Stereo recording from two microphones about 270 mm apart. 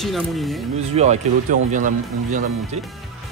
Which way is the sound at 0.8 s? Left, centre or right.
Right.